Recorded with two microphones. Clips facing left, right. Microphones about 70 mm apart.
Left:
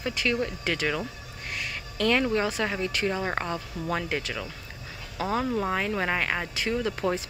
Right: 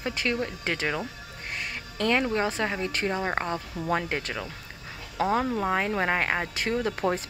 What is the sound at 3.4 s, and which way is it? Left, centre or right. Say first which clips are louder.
Speech: right 1 dB; right.